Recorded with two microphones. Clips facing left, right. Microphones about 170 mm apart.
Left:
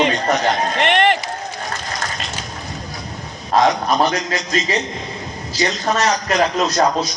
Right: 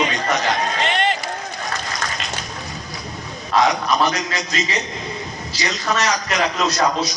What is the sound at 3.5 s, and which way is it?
Speech, 50° left (ahead or behind).